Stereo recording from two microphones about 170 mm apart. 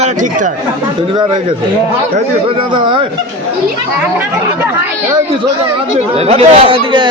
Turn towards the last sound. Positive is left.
turn(degrees=-30)  # may be behind; listen again after turning